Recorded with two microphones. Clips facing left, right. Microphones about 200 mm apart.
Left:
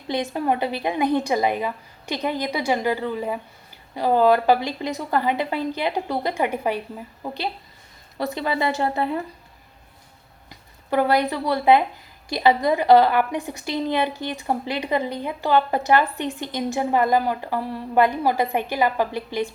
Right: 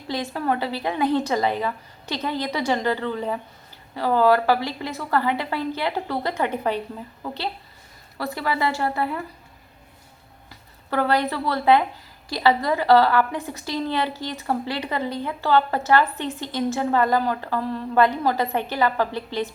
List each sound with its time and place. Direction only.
0.1 s a woman's voice: 20° left (ahead or behind)
10.5 s a woman's voice: 15° left (ahead or behind)